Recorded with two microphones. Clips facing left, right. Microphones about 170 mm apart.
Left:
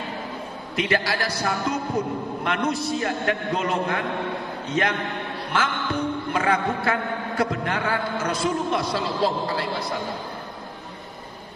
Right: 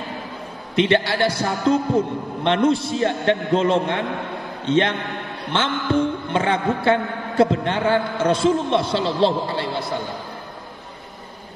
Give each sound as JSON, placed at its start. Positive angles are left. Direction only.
{"t": 0.7, "sound": "a man's voice", "side_deg": -25}